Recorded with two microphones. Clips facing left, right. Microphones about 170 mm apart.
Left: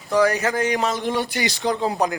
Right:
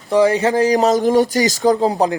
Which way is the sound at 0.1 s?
25° right (ahead or behind).